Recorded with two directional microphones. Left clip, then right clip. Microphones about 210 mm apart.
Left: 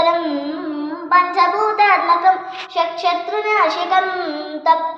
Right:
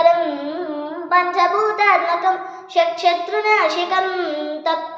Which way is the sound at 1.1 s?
15° right (ahead or behind).